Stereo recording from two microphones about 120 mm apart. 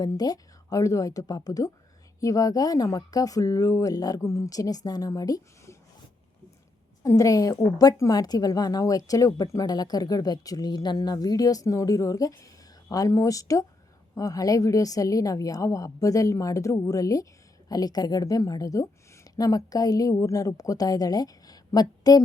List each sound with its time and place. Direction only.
0.0 s speech: 35° left (ahead or behind)
7.0 s a woman's voice: 25° left (ahead or behind)